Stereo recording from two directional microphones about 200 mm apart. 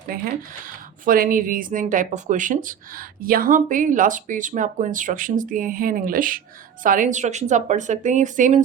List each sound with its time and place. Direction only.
0.1 s speech: 45° right (ahead or behind)